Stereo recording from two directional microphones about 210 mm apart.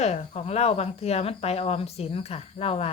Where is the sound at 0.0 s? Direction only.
30° left (ahead or behind).